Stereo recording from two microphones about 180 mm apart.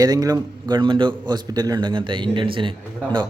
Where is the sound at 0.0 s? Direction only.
20° right (ahead or behind).